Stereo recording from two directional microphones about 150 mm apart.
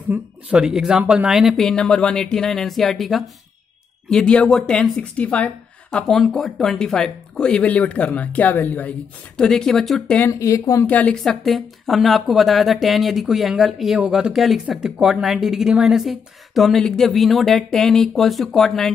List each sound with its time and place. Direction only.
0.1 s a woman's voice: 10° right (ahead or behind); by 10.3 s 10° left (ahead or behind)
10.4 s speech: 20° left (ahead or behind)
10.9 s speech: 10° left (ahead or behind)